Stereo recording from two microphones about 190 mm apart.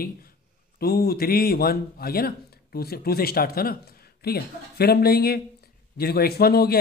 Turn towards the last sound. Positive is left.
turn(degrees=55)  # may be behind; listen again after turning